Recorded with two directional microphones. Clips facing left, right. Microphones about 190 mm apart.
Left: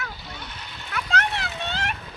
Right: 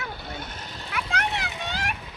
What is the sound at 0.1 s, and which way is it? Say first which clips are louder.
Vehicle: right 3 dB; 55° right (ahead or behind).